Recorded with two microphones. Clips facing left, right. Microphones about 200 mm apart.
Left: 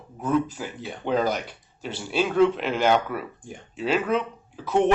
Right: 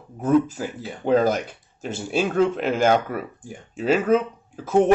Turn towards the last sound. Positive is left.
turn(degrees=-45)  # may be behind; listen again after turning